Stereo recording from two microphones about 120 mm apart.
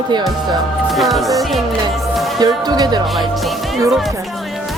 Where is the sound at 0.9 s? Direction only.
Centre (ahead or behind).